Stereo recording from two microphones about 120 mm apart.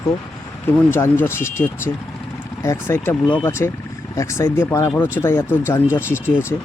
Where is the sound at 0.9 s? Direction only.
20° left (ahead or behind).